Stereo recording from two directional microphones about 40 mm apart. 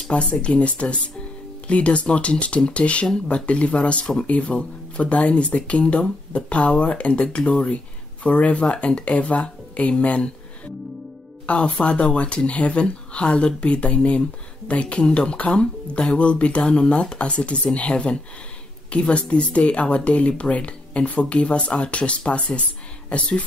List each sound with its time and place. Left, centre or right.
0.1 s speech: left
11.4 s speech: left